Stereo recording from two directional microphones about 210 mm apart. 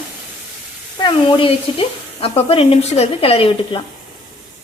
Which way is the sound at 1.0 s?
25° left (ahead or behind).